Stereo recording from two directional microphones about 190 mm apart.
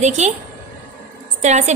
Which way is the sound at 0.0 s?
35° right (ahead or behind).